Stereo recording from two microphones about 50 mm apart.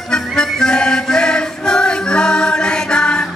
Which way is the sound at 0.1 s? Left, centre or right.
Centre.